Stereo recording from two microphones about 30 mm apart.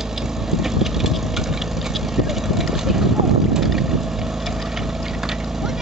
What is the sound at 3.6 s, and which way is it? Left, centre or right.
Boat, centre.